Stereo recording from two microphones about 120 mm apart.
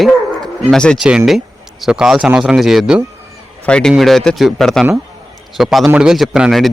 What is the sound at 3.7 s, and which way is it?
A man's voice, 10° left (ahead or behind).